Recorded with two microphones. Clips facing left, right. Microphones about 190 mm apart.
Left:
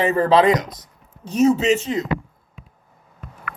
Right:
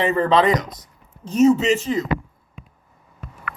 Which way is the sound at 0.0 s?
5° left (ahead or behind).